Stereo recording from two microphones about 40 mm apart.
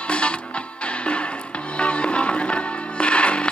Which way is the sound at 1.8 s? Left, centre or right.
Left.